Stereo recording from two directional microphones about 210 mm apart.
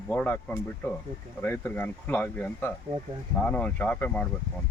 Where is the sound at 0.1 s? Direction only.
5° left (ahead or behind).